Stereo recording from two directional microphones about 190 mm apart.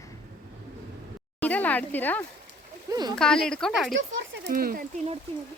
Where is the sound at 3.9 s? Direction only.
70° right (ahead or behind); by 5.0 s 50° right (ahead or behind).